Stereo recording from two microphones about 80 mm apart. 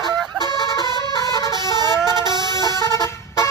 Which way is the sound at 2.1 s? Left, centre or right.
Right.